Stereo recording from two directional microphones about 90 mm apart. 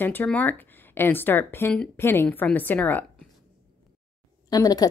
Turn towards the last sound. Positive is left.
turn(degrees=45)  # may be behind; listen again after turning